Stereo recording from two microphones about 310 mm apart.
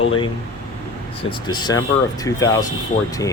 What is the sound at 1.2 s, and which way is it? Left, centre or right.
Speech, centre.